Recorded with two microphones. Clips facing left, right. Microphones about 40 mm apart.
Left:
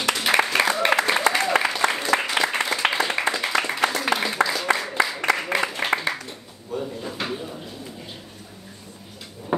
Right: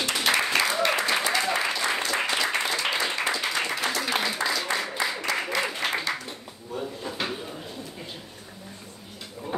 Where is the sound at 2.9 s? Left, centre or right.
Centre.